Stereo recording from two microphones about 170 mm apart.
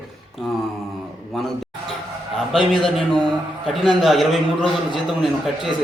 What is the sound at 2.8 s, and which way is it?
A man's voice, centre (ahead or behind).